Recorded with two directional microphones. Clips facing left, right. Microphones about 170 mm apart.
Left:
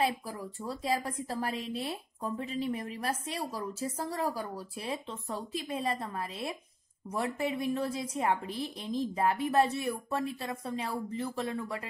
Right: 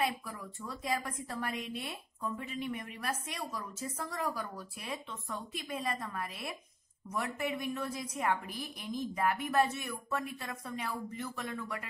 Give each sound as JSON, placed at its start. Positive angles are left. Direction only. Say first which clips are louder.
{"t": 0.0, "sound": "a woman's voice", "louder": "left 4 dB", "side_deg": 30}